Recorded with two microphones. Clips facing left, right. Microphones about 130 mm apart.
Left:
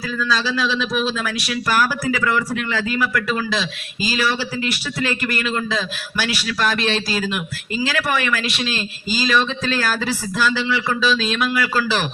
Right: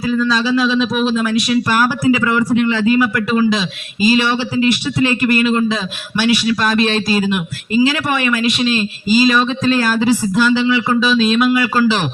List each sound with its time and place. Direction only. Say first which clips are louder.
0.1 s a man's voice: right 7 dB; 20° right (ahead or behind)